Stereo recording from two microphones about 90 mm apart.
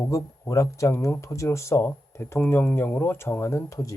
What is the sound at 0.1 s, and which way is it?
Speech, 35° left (ahead or behind).